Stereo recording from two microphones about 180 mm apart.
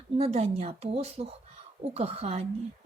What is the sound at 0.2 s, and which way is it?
Speech, 35° right (ahead or behind).